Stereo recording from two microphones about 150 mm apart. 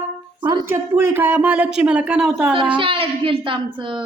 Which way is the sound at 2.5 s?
35° right (ahead or behind).